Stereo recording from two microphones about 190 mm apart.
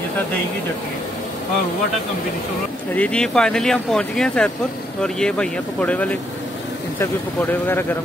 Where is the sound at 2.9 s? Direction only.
5° left (ahead or behind).